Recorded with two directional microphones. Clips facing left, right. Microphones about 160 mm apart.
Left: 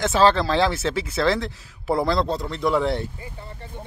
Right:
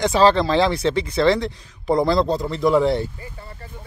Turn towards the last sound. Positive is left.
turn(degrees=0)  # may be behind; listen again after turning